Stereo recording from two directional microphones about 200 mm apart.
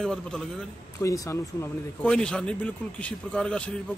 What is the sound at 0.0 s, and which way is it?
Speech, 5° left (ahead or behind).